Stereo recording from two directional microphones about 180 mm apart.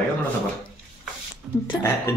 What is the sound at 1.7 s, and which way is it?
Speech, 15° left (ahead or behind).